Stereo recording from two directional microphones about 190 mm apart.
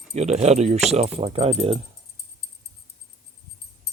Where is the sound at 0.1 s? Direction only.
35° right (ahead or behind).